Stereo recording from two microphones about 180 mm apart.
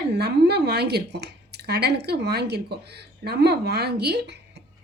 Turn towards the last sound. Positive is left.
turn(degrees=-70)  # may be behind; listen again after turning